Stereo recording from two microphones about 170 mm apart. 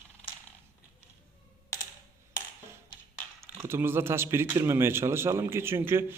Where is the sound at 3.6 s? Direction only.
15° right (ahead or behind).